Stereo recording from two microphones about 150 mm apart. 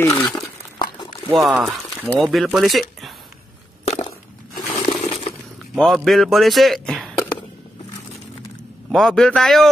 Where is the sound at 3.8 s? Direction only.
45° left (ahead or behind).